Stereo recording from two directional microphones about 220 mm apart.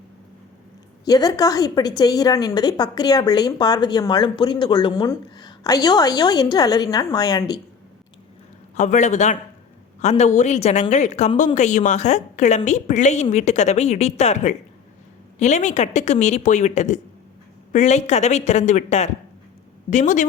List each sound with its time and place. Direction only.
1.0 s a woman's voice: 15° left (ahead or behind)
8.7 s a woman's voice: 35° left (ahead or behind)